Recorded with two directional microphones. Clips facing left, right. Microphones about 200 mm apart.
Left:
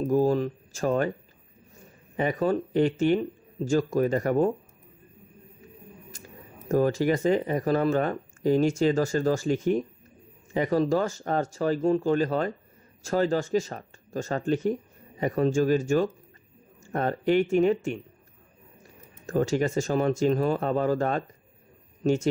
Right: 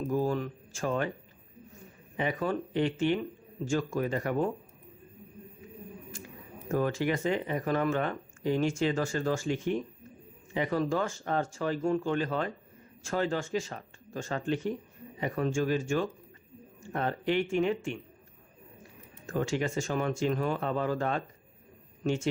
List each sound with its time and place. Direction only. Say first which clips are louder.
0.0 s speech: left 7 dB; 40° left (ahead or behind)
2.1 s speech: left 6 dB; 40° left (ahead or behind)
6.1 s a sound: right 3 dB; 40° left (ahead or behind)
6.7 s speech: left 6 dB; 35° left (ahead or behind)
19.2 s speech: left 6 dB; 40° left (ahead or behind)